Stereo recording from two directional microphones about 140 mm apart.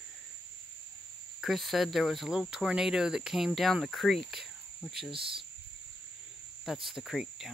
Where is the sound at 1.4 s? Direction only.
Centre (ahead or behind).